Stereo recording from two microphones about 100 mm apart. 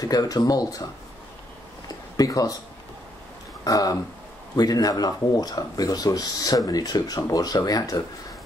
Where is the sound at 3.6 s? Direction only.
35° left (ahead or behind).